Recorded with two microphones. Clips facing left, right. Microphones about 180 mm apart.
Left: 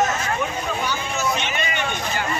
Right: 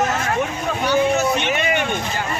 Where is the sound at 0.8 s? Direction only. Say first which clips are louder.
Right 8 dB; 65° right (ahead or behind).